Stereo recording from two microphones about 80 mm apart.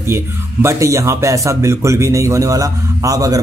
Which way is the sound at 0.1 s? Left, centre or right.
Right.